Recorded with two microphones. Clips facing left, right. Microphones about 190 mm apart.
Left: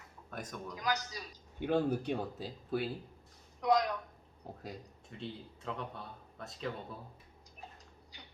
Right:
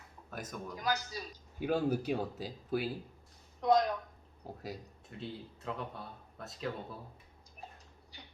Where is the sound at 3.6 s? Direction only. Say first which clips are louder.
Right 2 dB; 25° right (ahead or behind).